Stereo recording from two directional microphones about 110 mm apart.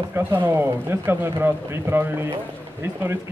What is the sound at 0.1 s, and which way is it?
Speech, 20° right (ahead or behind).